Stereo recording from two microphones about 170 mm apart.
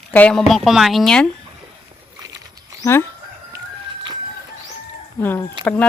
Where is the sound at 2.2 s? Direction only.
20° right (ahead or behind).